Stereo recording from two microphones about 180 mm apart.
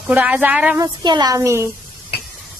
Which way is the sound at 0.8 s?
25° right (ahead or behind).